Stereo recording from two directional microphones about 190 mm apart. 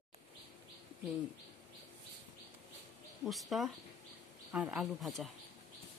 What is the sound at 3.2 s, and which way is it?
Speech, centre (ahead or behind).